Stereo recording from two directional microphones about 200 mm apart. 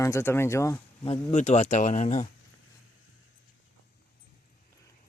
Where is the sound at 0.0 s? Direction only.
15° left (ahead or behind).